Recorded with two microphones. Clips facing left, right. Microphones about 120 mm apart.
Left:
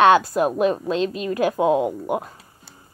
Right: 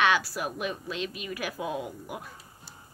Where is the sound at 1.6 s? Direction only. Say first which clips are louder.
Left 15 dB; 90° left.